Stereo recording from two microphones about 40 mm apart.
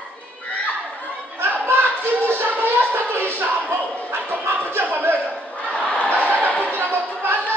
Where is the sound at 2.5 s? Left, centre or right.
Right.